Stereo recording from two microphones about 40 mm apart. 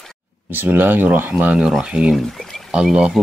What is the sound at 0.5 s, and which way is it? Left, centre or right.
Speech, right.